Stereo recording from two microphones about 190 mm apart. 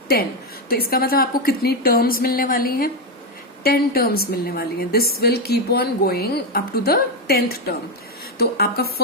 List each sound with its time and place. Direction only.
0.7 s a woman's voice: 50° left (ahead or behind)